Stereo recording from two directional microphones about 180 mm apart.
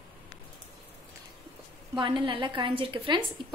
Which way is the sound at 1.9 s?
25° right (ahead or behind).